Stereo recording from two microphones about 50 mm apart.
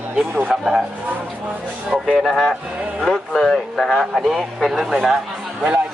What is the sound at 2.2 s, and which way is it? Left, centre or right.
A man's voice, centre.